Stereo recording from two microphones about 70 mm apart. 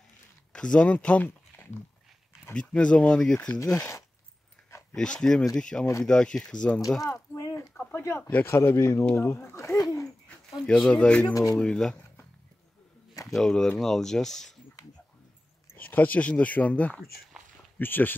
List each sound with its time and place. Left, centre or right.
0.5 s speech: centre
2.5 s speech: centre
3.5 s speech: left
4.9 s speech: centre
7.2 s a sound: left
7.8 s a sound: left
8.2 s speech: left
8.5 s speech: left
9.8 s speech: left
10.7 s speech: centre
13.3 s speech: centre
15.7 s speech: left
17.7 s speech: left